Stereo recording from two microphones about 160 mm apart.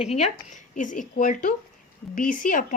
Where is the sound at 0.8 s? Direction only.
55° left (ahead or behind).